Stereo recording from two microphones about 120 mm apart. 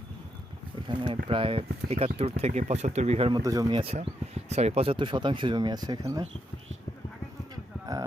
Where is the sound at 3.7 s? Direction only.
50° right (ahead or behind); by 6.2 s 30° right (ahead or behind).